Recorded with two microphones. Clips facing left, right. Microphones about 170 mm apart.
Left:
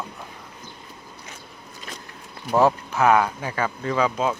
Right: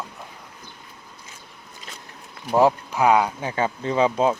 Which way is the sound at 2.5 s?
15° right (ahead or behind).